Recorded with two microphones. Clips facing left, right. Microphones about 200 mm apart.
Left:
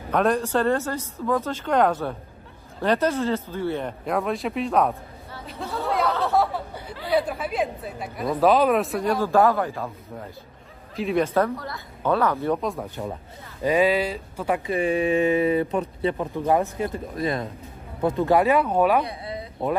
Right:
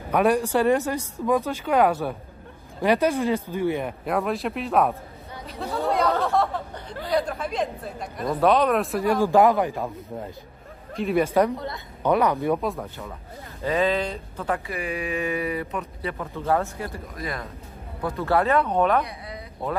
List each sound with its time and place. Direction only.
0.1 s speech: 10° right (ahead or behind)
4.0 s speech: centre (ahead or behind)
5.9 s chatter: centre (ahead or behind)
6.2 s a sound: 5° left (ahead or behind)
7.1 s speech: 5° left (ahead or behind)
9.2 s speech: 15° right (ahead or behind)
11.0 s speech: 5° right (ahead or behind)
13.0 s speech: 25° left (ahead or behind)
13.6 s speech: 15° left (ahead or behind)
14.7 s speech: 30° left (ahead or behind); by 19.0 s 10° left (ahead or behind)
19.0 s a sound: 30° left (ahead or behind)